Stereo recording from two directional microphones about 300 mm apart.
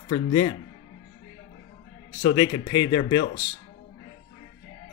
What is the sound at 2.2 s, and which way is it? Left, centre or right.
Speech, centre.